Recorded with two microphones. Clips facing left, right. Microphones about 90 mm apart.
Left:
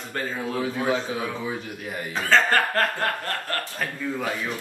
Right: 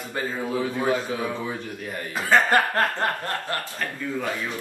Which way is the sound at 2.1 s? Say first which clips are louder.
Right 1 dB; 15° right (ahead or behind).